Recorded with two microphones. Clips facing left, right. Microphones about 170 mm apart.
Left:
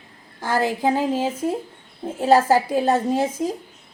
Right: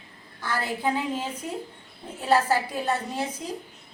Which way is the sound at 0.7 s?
40° left (ahead or behind).